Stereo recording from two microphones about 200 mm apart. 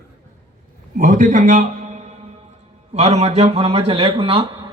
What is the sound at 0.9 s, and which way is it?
A man's voice, 40° right (ahead or behind).